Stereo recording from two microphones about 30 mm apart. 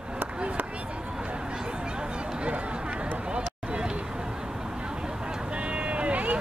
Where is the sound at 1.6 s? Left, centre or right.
Right.